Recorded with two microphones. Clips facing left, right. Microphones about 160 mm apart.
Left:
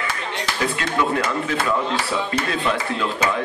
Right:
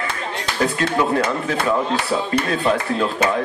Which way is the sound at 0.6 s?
35° right (ahead or behind).